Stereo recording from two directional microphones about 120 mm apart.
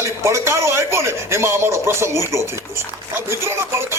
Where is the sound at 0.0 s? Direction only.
25° right (ahead or behind).